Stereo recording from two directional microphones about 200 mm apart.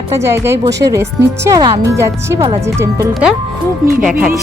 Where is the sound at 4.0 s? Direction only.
5° right (ahead or behind).